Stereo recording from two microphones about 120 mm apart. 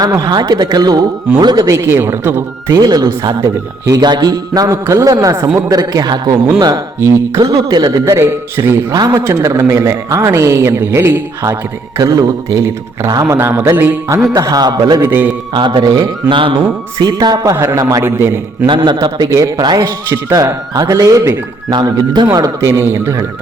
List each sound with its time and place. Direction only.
0.0 s a man's voice: 35° right (ahead or behind)
9.0 s a man's voice: 30° right (ahead or behind); by 14.3 s 15° right (ahead or behind)
14.3 s speech: 30° right (ahead or behind)
15.0 s a man's voice: 15° right (ahead or behind)
15.5 s a man's voice: 40° right (ahead or behind); by 18.3 s 20° right (ahead or behind)
18.6 s a man's voice: 40° right (ahead or behind); by 23.2 s 25° right (ahead or behind)